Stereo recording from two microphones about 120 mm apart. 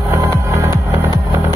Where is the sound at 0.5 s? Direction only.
25° right (ahead or behind).